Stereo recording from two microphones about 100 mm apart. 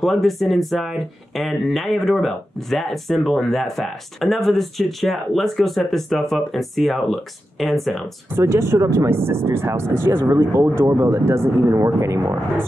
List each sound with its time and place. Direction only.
0.0 s speech: centre (ahead or behind)
8.4 s speech: 25° right (ahead or behind)